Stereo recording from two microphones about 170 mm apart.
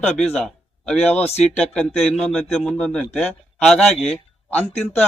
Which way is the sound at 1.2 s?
40° left (ahead or behind).